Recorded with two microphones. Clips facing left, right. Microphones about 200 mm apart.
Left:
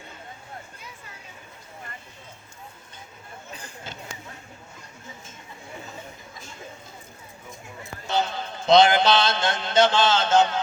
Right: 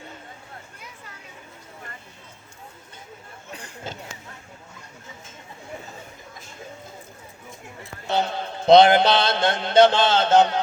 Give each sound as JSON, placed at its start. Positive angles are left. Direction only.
{"t": 8.0, "sound": "a man's voice", "side_deg": -60}